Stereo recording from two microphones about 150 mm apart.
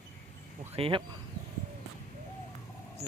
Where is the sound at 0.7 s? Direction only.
35° right (ahead or behind).